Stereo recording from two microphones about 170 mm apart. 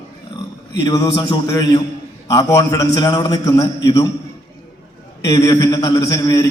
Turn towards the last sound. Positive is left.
turn(degrees=20)  # may be behind; listen again after turning